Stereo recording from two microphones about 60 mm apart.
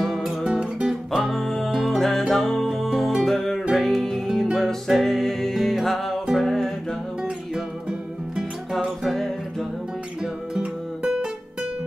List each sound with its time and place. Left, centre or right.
0.0 s music: centre
0.4 s music: centre
9.0 s music: centre
10.5 s music: centre